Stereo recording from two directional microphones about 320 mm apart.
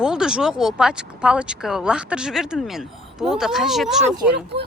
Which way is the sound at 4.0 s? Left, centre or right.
Right.